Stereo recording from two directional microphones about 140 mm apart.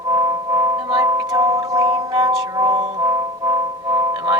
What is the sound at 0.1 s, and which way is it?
Music, 25° right (ahead or behind).